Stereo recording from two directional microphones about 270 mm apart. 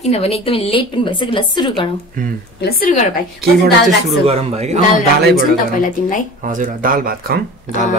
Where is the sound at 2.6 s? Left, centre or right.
Left.